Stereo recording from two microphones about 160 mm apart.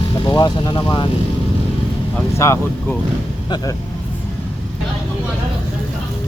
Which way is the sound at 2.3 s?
20° left (ahead or behind).